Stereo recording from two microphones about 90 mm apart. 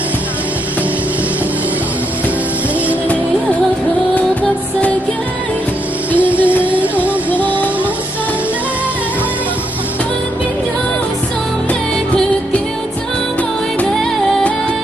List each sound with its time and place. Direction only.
6.1 s music: 15° right (ahead or behind)